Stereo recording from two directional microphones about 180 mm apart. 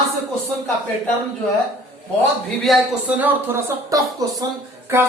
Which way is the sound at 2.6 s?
5° right (ahead or behind).